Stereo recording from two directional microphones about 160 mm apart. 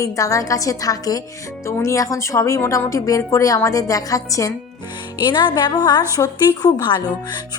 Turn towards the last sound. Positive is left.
turn(degrees=25)  # may be behind; listen again after turning